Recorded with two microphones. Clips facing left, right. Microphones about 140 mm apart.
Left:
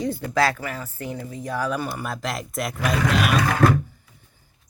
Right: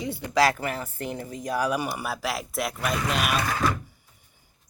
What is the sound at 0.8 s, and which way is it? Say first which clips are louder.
Speech: even; 25° right (ahead or behind).